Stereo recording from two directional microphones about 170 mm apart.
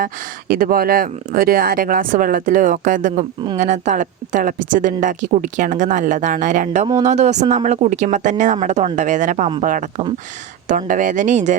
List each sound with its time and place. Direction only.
0.0 s speech: 55° right (ahead or behind)
10.7 s speech: 50° right (ahead or behind)